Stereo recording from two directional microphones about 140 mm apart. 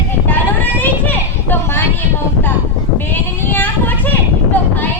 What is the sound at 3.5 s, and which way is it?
A woman's voice, 15° left (ahead or behind).